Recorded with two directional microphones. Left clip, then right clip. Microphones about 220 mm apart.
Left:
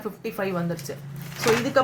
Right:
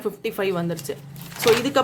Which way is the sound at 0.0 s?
40° right (ahead or behind).